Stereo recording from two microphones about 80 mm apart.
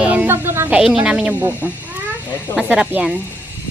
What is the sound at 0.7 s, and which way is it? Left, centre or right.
A woman's voice, centre.